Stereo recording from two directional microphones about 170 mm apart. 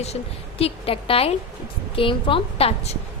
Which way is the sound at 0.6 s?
35° left (ahead or behind).